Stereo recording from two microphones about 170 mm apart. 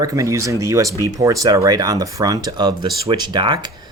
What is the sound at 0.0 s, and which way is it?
Speech, 20° right (ahead or behind).